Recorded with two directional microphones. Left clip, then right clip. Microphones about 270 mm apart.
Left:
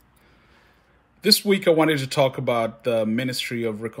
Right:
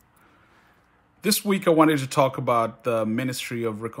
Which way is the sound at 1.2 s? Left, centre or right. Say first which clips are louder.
Left 5 dB; centre.